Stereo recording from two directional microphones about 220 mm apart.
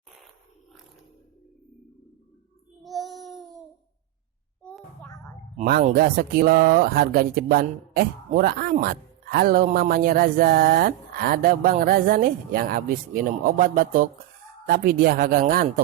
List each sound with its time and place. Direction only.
2.8 s child singing: centre (ahead or behind)
5.5 s speech: 40° right (ahead or behind)